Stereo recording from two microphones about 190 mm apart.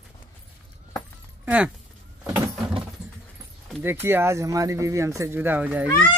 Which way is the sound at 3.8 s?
10° right (ahead or behind).